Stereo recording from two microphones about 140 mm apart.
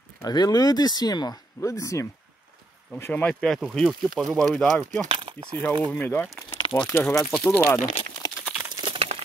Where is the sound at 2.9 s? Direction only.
10° left (ahead or behind).